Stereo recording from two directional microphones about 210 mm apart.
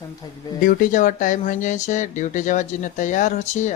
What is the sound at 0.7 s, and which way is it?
Speech, 35° left (ahead or behind).